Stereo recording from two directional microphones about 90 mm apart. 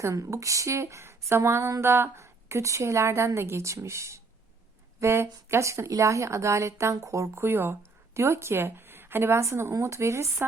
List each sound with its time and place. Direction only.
0.0 s speech: 35° right (ahead or behind)